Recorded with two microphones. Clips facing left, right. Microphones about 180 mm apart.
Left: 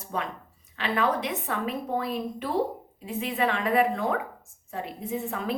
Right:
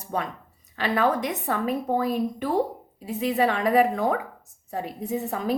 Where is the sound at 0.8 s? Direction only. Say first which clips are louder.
Right 3 dB; 40° right (ahead or behind).